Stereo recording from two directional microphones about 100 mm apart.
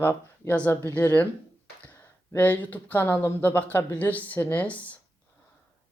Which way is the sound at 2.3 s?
15° left (ahead or behind).